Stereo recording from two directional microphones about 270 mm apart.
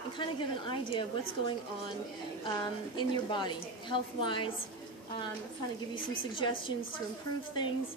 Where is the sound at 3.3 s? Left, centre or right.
Centre.